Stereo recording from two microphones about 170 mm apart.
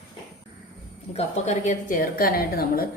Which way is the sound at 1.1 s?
40° left (ahead or behind).